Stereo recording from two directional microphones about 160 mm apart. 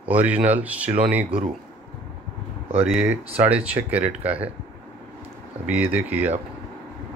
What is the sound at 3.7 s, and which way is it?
Speech, 10° right (ahead or behind).